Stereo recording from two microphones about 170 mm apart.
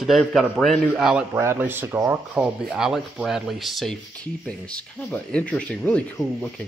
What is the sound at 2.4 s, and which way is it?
A man's voice, 5° right (ahead or behind).